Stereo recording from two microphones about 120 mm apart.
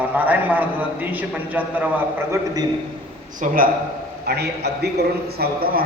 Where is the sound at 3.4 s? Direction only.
90° right.